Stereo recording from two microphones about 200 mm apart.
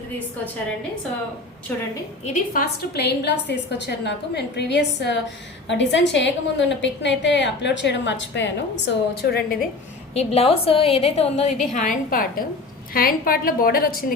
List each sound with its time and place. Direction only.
1.7 s a woman's voice: 5° left (ahead or behind)
2.2 s a woman's voice: 40° left (ahead or behind)
10.2 s a woman's voice: 30° left (ahead or behind)
11.7 s a woman's voice: 40° left (ahead or behind)